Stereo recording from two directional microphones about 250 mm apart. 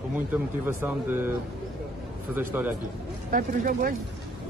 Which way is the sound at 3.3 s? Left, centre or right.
Right.